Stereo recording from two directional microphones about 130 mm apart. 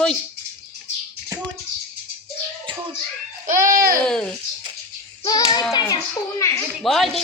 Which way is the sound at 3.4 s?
90° right.